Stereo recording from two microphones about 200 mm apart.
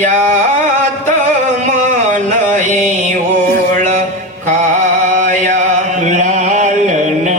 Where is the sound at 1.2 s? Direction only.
40° right (ahead or behind).